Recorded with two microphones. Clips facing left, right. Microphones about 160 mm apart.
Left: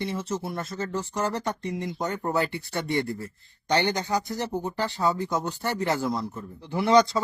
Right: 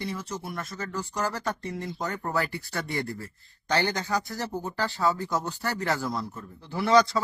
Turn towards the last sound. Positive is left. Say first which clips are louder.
# left 2 dB
turn(degrees=20)  # may be behind; listen again after turning